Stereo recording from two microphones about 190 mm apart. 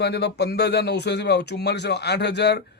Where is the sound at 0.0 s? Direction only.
60° left (ahead or behind).